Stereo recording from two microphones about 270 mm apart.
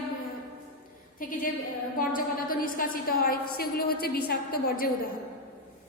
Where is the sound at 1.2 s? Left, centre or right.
Left.